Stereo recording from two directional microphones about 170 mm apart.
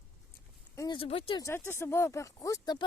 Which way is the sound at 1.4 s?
15° left (ahead or behind).